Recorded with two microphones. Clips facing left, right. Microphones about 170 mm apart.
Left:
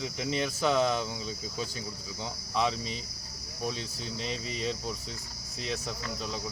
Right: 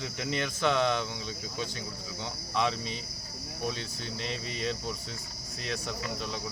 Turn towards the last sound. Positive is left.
turn(degrees=0)  # may be behind; listen again after turning